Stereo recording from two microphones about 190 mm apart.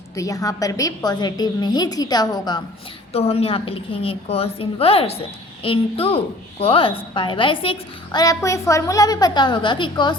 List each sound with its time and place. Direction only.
0.2 s a woman's voice: 20° left (ahead or behind)
3.1 s a woman's voice: 30° left (ahead or behind)